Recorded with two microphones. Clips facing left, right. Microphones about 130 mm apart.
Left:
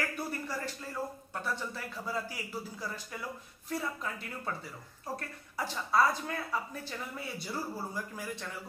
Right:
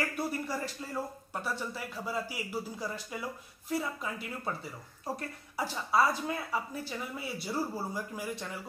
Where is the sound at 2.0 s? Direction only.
10° right (ahead or behind).